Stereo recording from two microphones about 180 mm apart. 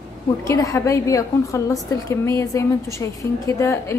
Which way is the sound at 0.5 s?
15° left (ahead or behind).